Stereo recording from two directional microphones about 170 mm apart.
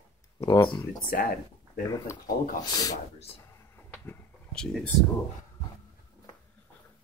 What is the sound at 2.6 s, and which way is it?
Speech, 25° left (ahead or behind).